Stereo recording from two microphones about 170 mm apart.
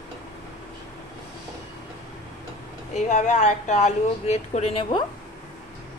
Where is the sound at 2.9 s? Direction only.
45° left (ahead or behind).